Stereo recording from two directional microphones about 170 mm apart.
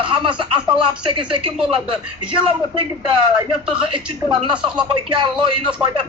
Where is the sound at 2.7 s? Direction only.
30° right (ahead or behind).